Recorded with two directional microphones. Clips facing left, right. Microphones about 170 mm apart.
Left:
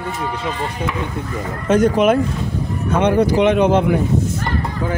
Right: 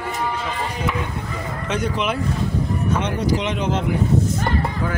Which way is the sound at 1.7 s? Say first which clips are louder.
Left 10 dB; 45° left (ahead or behind).